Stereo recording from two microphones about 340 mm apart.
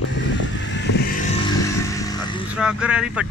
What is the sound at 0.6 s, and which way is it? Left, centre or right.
Vehicle, left.